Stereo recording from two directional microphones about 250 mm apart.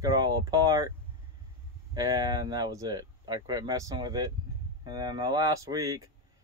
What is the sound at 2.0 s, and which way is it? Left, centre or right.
Speech, centre.